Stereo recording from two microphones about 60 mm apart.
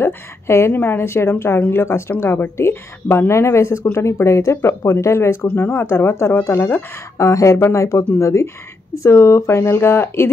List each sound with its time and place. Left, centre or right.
0.0 s speech: left
5.5 s speech: left
7.2 s speech: left